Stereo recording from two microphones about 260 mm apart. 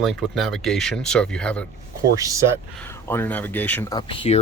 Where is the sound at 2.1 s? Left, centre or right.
Centre.